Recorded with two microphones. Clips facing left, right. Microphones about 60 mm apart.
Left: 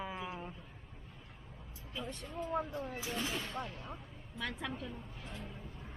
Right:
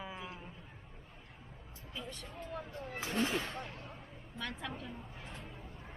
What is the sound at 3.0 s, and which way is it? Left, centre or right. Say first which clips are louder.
Speech: right 9 dB; centre.